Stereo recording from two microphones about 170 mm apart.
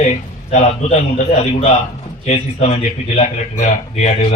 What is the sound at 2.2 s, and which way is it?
A man's voice, 40° left (ahead or behind).